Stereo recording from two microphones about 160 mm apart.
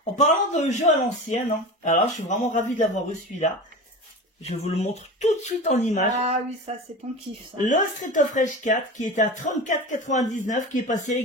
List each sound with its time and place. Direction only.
0.0 s speech: 50° left (ahead or behind)
4.5 s speech: 40° left (ahead or behind)
6.2 s speech: 40° right (ahead or behind)
7.6 s speech: 50° left (ahead or behind)